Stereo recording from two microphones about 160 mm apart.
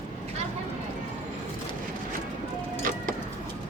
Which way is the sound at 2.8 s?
55° right (ahead or behind).